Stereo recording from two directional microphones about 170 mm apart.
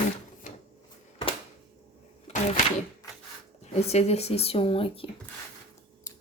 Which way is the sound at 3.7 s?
40° left (ahead or behind).